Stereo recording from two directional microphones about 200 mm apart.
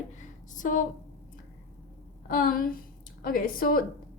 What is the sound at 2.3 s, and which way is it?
Speech, 45° left (ahead or behind).